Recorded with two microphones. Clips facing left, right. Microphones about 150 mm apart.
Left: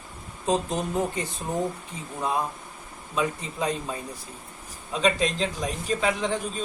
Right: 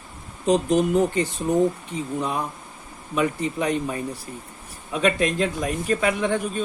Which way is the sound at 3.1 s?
70° right (ahead or behind).